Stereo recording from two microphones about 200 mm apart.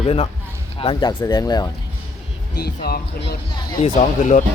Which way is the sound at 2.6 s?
50° left (ahead or behind).